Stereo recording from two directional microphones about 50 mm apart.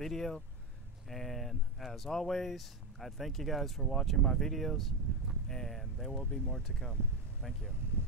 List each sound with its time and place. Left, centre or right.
0.0 s speech: centre
6.1 s speech: centre